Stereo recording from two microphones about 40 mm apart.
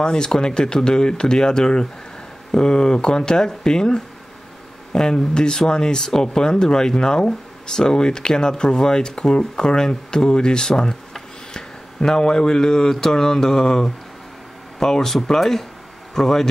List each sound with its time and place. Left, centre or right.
0.0 s speech: centre